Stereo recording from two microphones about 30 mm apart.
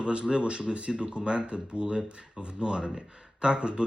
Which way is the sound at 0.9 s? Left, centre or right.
Right.